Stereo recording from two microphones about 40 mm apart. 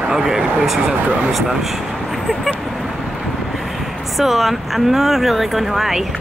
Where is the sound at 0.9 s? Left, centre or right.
Right.